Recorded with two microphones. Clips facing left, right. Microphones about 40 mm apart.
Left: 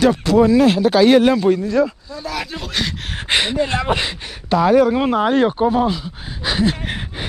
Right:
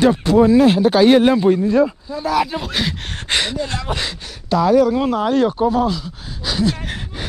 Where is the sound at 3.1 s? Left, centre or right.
Centre.